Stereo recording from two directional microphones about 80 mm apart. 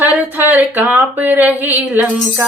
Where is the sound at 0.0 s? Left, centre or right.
Right.